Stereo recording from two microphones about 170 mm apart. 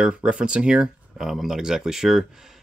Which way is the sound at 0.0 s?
5° right (ahead or behind).